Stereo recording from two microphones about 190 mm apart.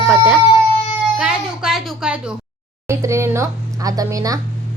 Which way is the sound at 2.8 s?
15° right (ahead or behind).